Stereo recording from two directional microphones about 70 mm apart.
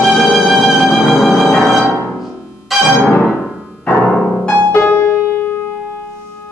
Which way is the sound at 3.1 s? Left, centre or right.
Left.